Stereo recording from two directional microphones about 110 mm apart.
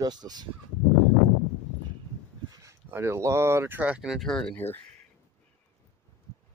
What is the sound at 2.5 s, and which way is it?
Speech, 30° right (ahead or behind).